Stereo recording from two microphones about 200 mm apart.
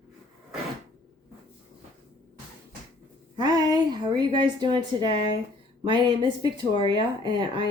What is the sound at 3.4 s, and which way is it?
A woman's voice, 20° right (ahead or behind).